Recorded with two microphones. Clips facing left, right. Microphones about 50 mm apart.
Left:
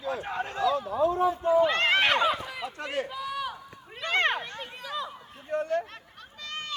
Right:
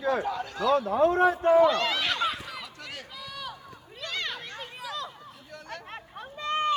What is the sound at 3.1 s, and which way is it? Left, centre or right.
Run, centre.